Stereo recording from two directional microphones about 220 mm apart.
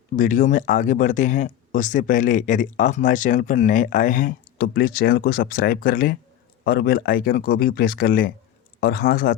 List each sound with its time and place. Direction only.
0.2 s speech: 35° left (ahead or behind)